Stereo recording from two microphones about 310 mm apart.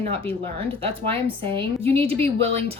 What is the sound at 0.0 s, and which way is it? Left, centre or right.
A woman's voice, centre.